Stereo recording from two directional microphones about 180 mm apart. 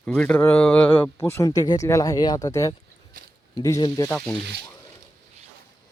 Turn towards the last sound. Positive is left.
turn(degrees=15)  # may be behind; listen again after turning